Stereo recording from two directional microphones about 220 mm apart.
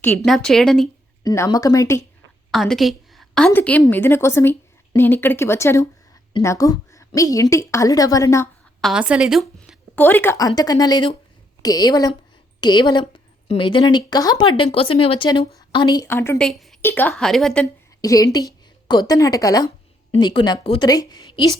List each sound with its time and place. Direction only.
0.3 s a woman's voice: centre (ahead or behind)
1.2 s speech: 15° left (ahead or behind)
2.5 s a woman's voice: centre (ahead or behind)
8.8 s a woman's voice: 5° right (ahead or behind)
16.5 s a woman's voice: centre (ahead or behind)
18.0 s a woman's voice: 15° left (ahead or behind)